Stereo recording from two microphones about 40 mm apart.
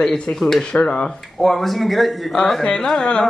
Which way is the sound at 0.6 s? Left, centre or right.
Left.